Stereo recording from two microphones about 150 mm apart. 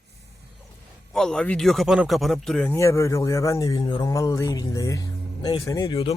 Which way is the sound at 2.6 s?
20° left (ahead or behind).